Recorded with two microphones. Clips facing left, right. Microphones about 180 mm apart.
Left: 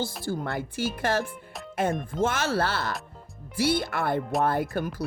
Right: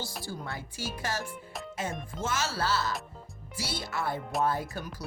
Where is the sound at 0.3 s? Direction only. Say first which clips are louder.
Left 9 dB; 55° left (ahead or behind).